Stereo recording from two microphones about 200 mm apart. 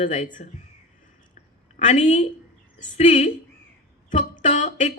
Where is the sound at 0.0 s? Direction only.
35° left (ahead or behind).